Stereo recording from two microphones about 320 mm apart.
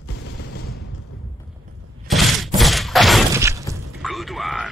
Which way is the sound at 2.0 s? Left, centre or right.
Centre.